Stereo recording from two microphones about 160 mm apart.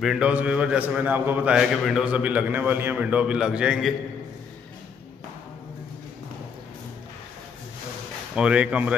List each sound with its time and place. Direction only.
0.0 s a man's voice: 5° right (ahead or behind)
8.4 s a man's voice: 5° right (ahead or behind)